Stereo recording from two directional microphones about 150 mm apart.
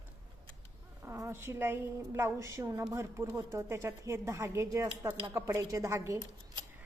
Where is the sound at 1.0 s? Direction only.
15° right (ahead or behind).